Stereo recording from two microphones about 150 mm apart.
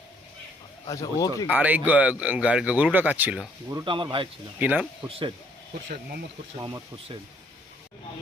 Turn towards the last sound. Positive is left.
turn(degrees=-25)  # may be behind; listen again after turning